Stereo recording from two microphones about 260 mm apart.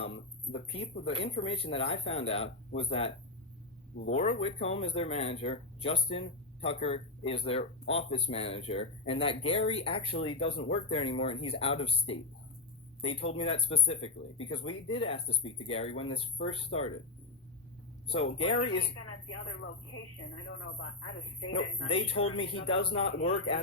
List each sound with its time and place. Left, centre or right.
0.5 s speech: left
4.1 s speech: left
18.3 s speech: left
19.0 s speech: left
21.8 s speech: left